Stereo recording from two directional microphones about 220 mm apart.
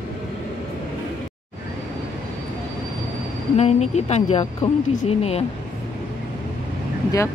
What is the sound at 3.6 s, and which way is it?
Speech, 30° left (ahead or behind).